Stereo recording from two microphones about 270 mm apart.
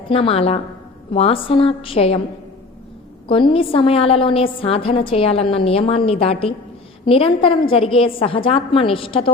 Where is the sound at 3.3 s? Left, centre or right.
Centre.